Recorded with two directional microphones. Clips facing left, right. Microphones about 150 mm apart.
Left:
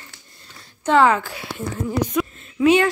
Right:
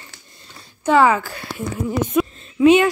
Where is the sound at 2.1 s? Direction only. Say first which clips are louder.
Right 4 dB; 20° right (ahead or behind).